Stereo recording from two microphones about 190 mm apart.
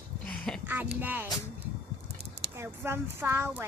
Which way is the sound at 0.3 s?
5° left (ahead or behind).